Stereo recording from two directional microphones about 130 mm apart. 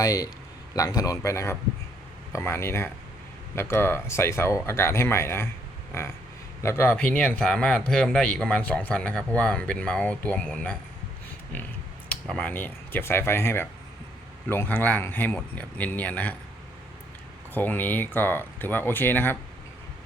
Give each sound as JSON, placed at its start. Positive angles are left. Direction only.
{"t": 0.0, "sound": "speech", "side_deg": 30}
{"t": 12.0, "sound": "speech", "side_deg": 10}
{"t": 17.5, "sound": "speech", "side_deg": 15}